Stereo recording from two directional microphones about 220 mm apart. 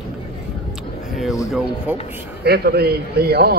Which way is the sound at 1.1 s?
Centre (ahead or behind).